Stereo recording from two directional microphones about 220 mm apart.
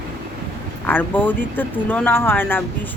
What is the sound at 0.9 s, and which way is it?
Speech, 10° left (ahead or behind).